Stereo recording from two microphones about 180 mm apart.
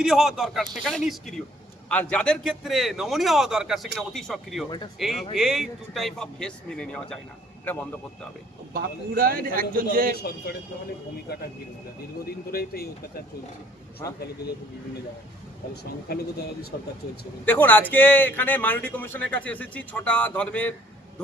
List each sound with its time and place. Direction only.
0.0 s a man's voice: centre (ahead or behind)
8.7 s a man's voice: 55° right (ahead or behind)
10.2 s speech: 60° left (ahead or behind)
12.5 s speech: 60° left (ahead or behind)
15.7 s speech: 65° left (ahead or behind)
17.4 s a man's voice: 10° left (ahead or behind)